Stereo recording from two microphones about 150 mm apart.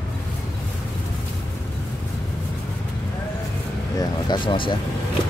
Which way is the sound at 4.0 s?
30° left (ahead or behind).